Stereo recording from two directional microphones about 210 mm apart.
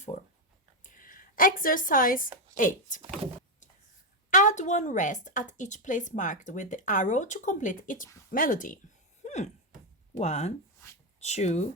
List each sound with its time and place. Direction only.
0.9 s a woman's voice: 40° left (ahead or behind)
4.3 s a woman's voice: 35° left (ahead or behind)
9.2 s a sound: 35° left (ahead or behind)
10.2 s a woman's voice: 35° left (ahead or behind)